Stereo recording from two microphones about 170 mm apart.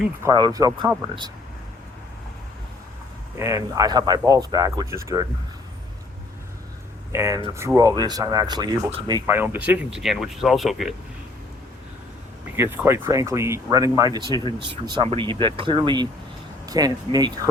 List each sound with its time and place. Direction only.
0.3 s speech: 25° right (ahead or behind)
3.3 s speech: 20° right (ahead or behind)
7.1 s speech: 15° right (ahead or behind)
9.3 s speech: 10° right (ahead or behind)
12.5 s speech: 15° right (ahead or behind)